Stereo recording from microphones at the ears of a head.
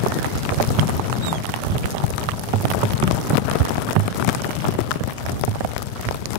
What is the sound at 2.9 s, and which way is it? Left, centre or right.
Rain, left.